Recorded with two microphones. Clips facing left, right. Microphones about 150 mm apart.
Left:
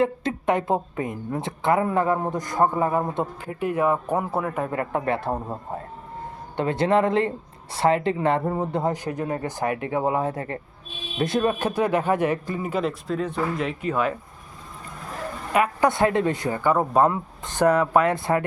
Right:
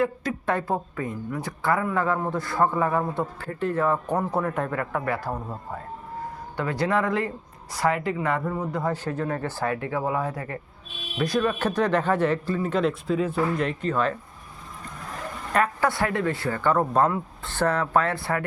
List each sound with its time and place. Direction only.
0.0 s a woman's voice: 20° left (ahead or behind); by 4.7 s 5° left (ahead or behind)
4.7 s a woman's voice: 25° left (ahead or behind)
8.9 s a man's voice: 15° left (ahead or behind)
11.6 s a man's voice: 10° left (ahead or behind)
12.8 s speech: centre (ahead or behind)
15.5 s a man's voice: 15° left (ahead or behind)